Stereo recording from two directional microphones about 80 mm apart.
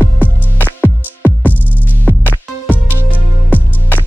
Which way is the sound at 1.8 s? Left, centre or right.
Left.